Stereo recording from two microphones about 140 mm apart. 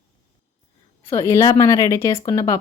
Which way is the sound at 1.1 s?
20° left (ahead or behind).